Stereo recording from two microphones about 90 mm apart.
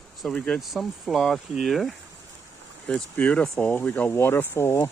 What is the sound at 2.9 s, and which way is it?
Speech, 15° left (ahead or behind).